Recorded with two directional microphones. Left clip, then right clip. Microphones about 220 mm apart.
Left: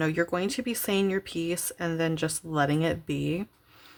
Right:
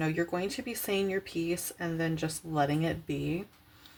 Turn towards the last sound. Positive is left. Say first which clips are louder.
# left 4 dB
turn(degrees=30)  # may be behind; listen again after turning